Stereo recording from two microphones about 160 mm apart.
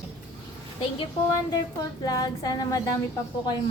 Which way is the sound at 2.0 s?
25° left (ahead or behind).